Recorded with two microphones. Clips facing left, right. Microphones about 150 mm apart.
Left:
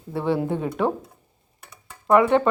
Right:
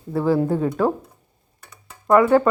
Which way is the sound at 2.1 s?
25° left (ahead or behind).